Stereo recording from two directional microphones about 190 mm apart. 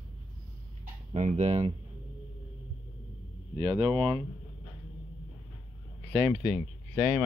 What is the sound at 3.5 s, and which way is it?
Speech, 25° right (ahead or behind).